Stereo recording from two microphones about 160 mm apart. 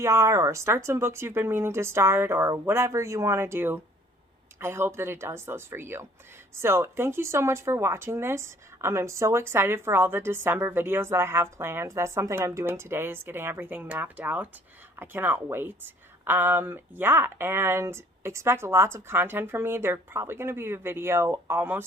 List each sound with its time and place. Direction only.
0.0 s speech: 20° right (ahead or behind)